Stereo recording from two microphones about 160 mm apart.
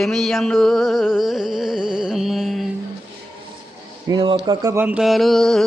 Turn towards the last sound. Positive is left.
turn(degrees=0)  # may be behind; listen again after turning